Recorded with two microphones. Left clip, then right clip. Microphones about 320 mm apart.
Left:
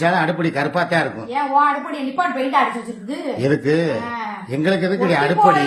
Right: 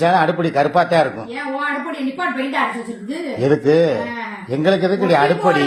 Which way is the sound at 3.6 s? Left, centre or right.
Right.